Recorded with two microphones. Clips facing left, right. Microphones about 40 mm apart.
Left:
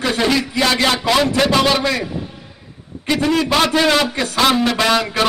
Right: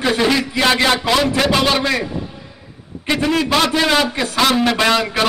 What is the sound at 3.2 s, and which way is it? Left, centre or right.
A man's voice, centre.